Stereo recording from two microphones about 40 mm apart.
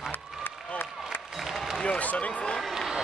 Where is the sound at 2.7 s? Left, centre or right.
Centre.